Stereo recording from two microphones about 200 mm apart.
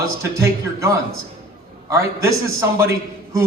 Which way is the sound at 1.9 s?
15° right (ahead or behind).